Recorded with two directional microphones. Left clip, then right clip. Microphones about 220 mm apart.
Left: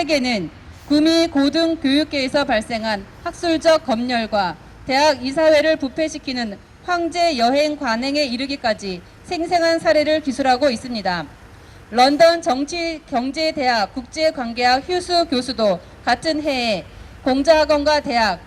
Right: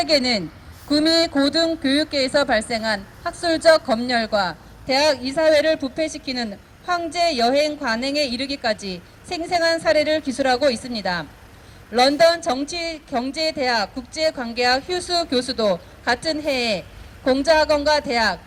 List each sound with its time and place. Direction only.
0.0 s a woman's voice: 20° right (ahead or behind)